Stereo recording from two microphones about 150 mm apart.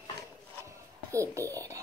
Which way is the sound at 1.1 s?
20° right (ahead or behind).